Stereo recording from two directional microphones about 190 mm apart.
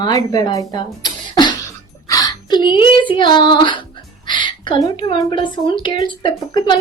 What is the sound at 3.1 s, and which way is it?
Music, 25° left (ahead or behind).